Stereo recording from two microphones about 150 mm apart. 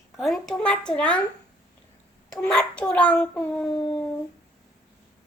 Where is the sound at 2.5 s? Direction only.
5° left (ahead or behind).